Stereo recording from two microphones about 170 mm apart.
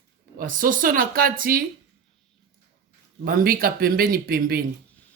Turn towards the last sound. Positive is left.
turn(degrees=-60)  # may be behind; listen again after turning